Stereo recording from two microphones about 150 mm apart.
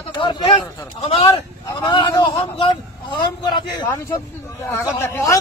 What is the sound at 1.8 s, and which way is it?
Speech, 30° left (ahead or behind).